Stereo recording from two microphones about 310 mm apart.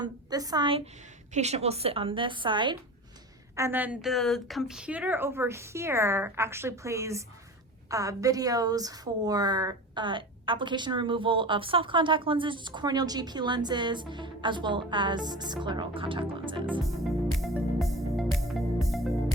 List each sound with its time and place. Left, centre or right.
0.0 s a woman's voice: centre
17.0 s music: centre